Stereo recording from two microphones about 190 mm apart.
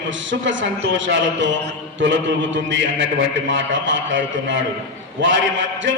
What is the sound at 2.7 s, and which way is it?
A man's voice, 75° right (ahead or behind).